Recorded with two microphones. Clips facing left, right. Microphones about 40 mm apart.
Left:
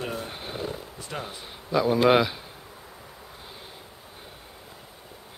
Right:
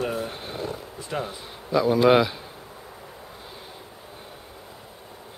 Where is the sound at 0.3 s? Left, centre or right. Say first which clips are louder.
Right 1 dB; centre.